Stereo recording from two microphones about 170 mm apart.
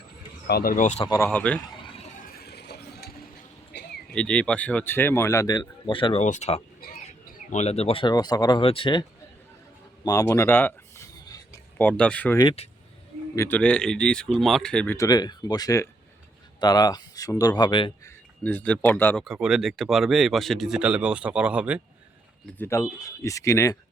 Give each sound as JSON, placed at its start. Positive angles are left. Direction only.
{"t": 0.4, "sound": "speech", "side_deg": 65}
{"t": 1.1, "sound": "speech", "side_deg": 10}
{"t": 2.1, "sound": "a sound", "side_deg": 60}
{"t": 4.1, "sound": "speech", "side_deg": 5}
{"t": 6.2, "sound": "speech", "side_deg": 45}
{"t": 10.0, "sound": "a sound", "side_deg": 20}
{"t": 11.9, "sound": "speech", "side_deg": 5}
{"t": 12.4, "sound": "speech", "side_deg": 30}
{"t": 13.3, "sound": "speech", "side_deg": 15}
{"t": 13.6, "sound": "speech", "side_deg": 5}
{"t": 14.9, "sound": "speech", "side_deg": 20}
{"t": 18.0, "sound": "speech", "side_deg": 10}
{"t": 19.2, "sound": "speech", "side_deg": -5}
{"t": 22.5, "sound": "speech", "side_deg": 15}